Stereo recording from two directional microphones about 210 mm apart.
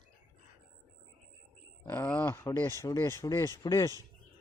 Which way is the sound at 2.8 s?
15° left (ahead or behind).